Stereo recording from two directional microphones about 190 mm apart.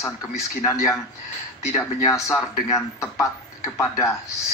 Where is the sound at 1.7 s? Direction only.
15° left (ahead or behind).